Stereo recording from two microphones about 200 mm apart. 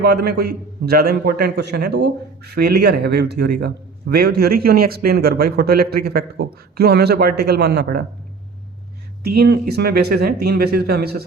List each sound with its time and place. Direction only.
0.0 s a man's voice: 50° right (ahead or behind)
9.2 s a man's voice: 55° right (ahead or behind)